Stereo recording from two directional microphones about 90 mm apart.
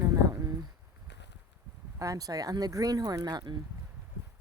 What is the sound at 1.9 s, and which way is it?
Speech, 40° right (ahead or behind).